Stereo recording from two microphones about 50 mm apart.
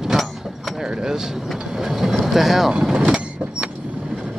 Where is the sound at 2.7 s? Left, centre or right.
Centre.